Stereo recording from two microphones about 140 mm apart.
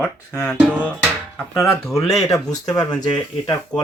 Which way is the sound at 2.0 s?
Centre (ahead or behind).